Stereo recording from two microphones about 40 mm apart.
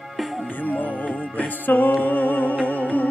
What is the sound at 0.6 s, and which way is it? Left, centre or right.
Music, left.